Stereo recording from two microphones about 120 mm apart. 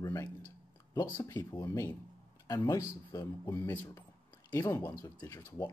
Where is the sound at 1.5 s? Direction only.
35° left (ahead or behind).